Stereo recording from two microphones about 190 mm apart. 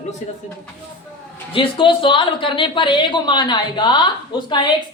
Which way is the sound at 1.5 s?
25° left (ahead or behind).